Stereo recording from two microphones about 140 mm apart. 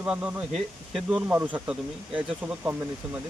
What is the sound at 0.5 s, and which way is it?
Speech, centre (ahead or behind).